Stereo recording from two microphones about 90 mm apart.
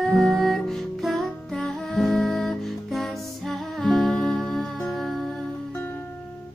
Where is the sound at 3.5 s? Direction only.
5° left (ahead or behind).